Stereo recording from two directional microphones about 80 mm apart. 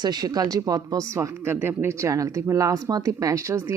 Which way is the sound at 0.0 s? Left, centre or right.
Right.